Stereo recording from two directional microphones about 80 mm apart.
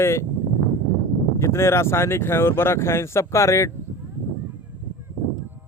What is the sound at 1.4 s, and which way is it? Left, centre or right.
Speech, left.